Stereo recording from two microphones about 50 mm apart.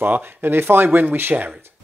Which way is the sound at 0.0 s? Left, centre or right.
Right.